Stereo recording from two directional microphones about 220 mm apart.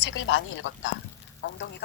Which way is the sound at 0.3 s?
60° left (ahead or behind).